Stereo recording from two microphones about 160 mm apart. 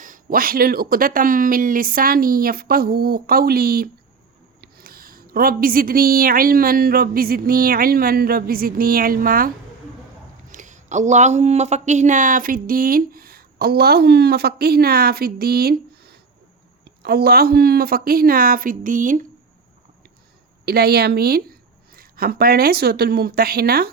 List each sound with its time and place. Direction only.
0.0 s a woman's voice: 60° right (ahead or behind)
10.5 s a woman's voice: 50° right (ahead or behind)
20.7 s speech: 80° right